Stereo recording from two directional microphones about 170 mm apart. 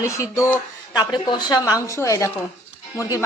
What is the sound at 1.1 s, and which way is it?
A woman's voice, 25° left (ahead or behind).